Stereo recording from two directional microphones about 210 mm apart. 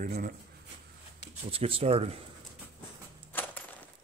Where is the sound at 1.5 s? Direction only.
25° right (ahead or behind).